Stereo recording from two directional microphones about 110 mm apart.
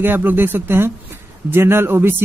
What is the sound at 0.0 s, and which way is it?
Speech, 20° right (ahead or behind).